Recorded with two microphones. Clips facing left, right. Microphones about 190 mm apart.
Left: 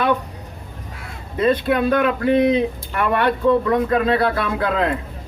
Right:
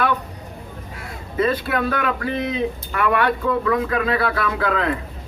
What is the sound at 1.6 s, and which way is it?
Speech, 25° left (ahead or behind).